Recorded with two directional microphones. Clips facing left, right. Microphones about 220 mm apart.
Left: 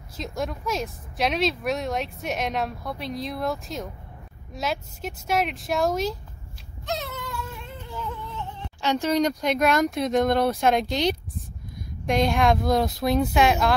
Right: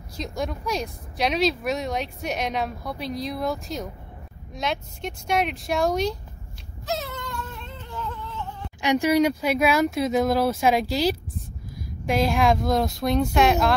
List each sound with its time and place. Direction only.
0.2 s speech: centre (ahead or behind)
6.9 s cat: centre (ahead or behind)
8.8 s speech: 10° right (ahead or behind)